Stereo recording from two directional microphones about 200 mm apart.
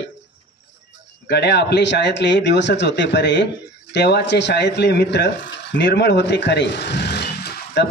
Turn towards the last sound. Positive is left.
turn(degrees=55)  # may be behind; listen again after turning